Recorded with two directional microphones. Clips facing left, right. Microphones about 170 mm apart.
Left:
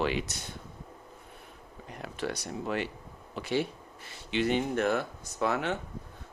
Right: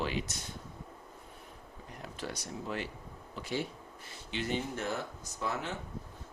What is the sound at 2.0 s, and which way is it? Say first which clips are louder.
Speech: left 6 dB; 70° left (ahead or behind).